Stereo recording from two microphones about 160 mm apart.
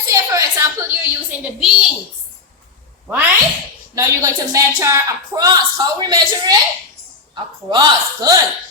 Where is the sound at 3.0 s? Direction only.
10° right (ahead or behind); by 7.8 s 30° right (ahead or behind).